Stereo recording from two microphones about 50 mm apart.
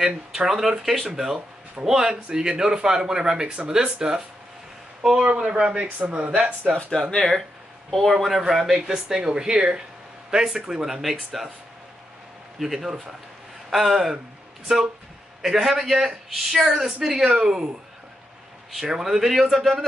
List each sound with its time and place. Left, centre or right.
0.0 s speech: centre
5.2 s speech: right
7.1 s speech: centre
12.5 s speech: centre
15.4 s speech: centre
18.8 s speech: centre